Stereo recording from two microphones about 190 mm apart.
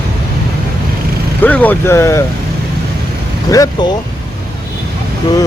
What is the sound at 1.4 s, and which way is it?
Speech, 10° left (ahead or behind).